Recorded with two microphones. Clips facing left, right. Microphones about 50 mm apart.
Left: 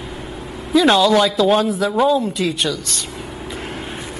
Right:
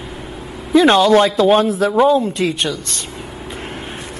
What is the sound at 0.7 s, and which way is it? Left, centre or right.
A man's voice, right.